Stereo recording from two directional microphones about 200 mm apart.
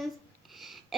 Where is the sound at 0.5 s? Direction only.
Centre (ahead or behind).